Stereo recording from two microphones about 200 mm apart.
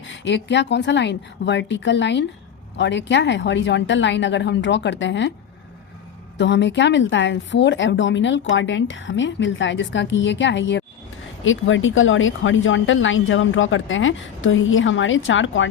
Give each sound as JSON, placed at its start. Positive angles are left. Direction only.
{"t": 0.0, "sound": "a woman's voice", "side_deg": 65}
{"t": 6.3, "sound": "a woman's voice", "side_deg": 65}
{"t": 11.4, "sound": "speech", "side_deg": 75}